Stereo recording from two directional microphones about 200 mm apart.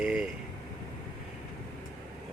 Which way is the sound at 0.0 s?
5° right (ahead or behind).